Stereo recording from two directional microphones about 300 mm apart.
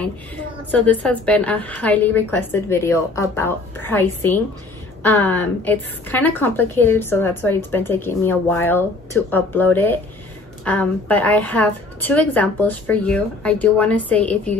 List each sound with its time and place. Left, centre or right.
0.7 s a woman's voice: centre